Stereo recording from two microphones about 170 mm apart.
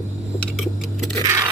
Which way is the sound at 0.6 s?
Centre (ahead or behind).